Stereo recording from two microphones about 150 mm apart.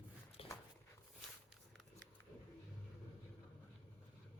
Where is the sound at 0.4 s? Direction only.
40° left (ahead or behind).